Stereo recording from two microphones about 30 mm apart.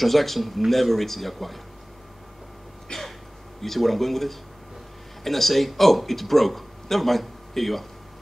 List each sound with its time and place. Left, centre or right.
0.0 s speech: centre
2.9 s throat clearing: left
3.6 s a man's voice: centre